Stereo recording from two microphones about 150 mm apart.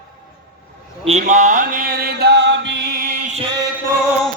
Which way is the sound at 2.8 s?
90° right.